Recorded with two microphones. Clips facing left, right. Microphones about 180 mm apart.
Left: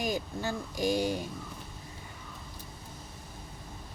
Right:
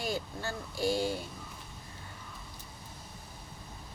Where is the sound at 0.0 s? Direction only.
15° left (ahead or behind).